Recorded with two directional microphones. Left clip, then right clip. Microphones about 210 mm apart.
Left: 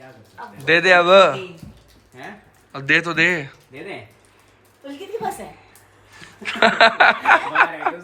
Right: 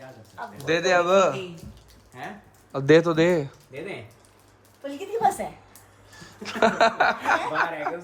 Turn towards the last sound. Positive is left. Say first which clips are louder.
# left 7 dB
turn(degrees=0)  # may be behind; listen again after turning